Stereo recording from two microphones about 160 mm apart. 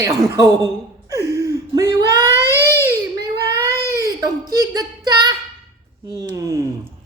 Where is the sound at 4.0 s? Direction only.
20° right (ahead or behind).